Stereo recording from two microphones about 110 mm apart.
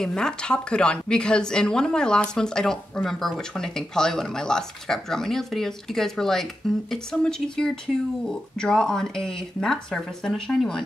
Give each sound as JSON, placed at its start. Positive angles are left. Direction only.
{"t": 0.0, "sound": "a woman's voice", "side_deg": 5}